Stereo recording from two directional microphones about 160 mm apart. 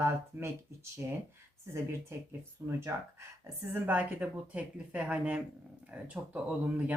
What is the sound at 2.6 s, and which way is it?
Speech, 20° right (ahead or behind).